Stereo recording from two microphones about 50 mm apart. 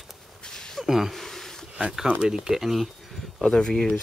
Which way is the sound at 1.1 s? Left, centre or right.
Centre.